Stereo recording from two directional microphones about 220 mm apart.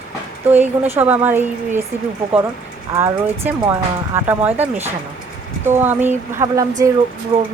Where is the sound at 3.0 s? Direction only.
10° right (ahead or behind).